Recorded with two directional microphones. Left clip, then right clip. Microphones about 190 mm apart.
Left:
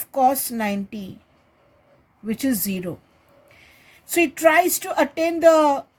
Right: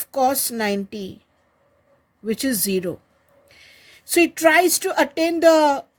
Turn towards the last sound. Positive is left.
turn(degrees=-40)  # may be behind; listen again after turning